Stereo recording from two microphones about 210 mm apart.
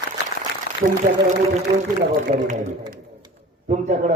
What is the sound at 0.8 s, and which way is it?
Speech, 55° left (ahead or behind).